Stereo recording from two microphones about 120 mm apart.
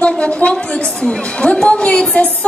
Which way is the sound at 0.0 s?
10° left (ahead or behind).